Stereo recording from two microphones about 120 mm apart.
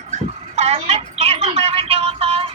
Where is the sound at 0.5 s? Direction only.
60° right (ahead or behind).